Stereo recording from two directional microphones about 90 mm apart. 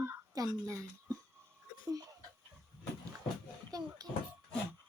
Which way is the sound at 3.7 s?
45° right (ahead or behind).